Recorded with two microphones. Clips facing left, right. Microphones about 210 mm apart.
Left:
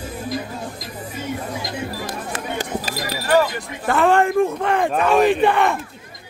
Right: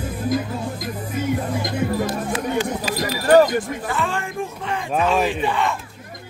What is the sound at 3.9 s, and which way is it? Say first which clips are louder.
Speech: left 9 dB; 60° left (ahead or behind).